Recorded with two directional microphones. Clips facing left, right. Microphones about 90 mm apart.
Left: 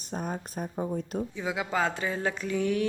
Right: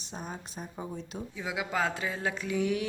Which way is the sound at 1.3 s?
Centre (ahead or behind).